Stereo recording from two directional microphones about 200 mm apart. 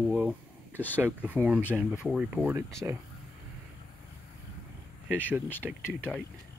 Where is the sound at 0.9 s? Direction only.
10° right (ahead or behind).